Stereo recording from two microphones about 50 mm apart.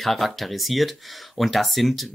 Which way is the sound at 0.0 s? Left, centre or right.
Centre.